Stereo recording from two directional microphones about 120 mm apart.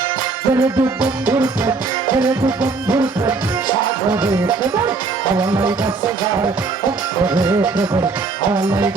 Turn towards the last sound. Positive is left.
turn(degrees=-20)  # may be behind; listen again after turning